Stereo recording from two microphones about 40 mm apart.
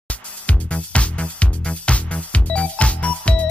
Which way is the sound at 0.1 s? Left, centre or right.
Left.